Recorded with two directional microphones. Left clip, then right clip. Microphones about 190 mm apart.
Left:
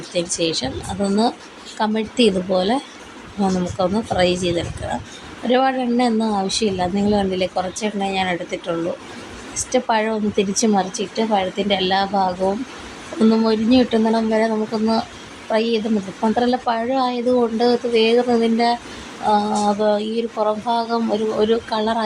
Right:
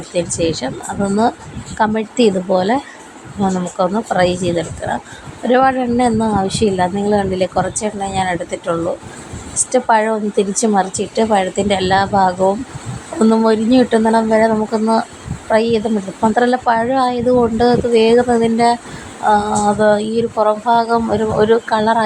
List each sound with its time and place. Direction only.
0.1 s a woman's voice: 20° right (ahead or behind)
9.7 s speech: 15° right (ahead or behind)
11.1 s a woman's voice: 25° right (ahead or behind)
13.3 s speech: 20° right (ahead or behind)